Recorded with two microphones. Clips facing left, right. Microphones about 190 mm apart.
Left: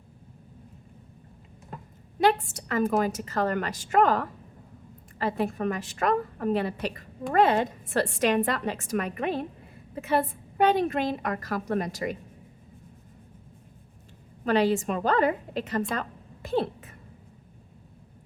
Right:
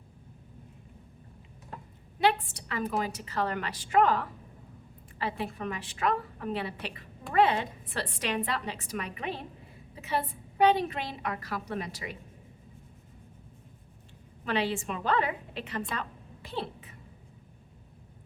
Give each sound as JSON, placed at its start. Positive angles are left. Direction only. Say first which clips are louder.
{"t": 2.1, "sound": "a woman's voice", "louder": "left 4 dB", "side_deg": 45}
{"t": 14.4, "sound": "a woman's voice", "louder": "left 7 dB", "side_deg": 45}